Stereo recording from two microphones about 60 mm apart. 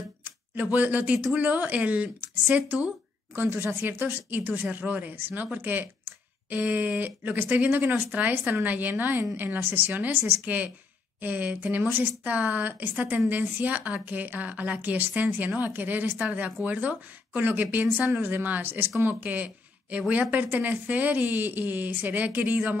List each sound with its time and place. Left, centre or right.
0.2 s a woman's voice: right
3.3 s speech: right
4.3 s a woman's voice: right